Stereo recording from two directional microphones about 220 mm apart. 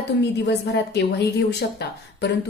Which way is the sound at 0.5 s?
50° left (ahead or behind).